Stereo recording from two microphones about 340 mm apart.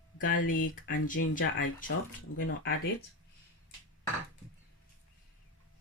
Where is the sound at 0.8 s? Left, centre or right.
Left.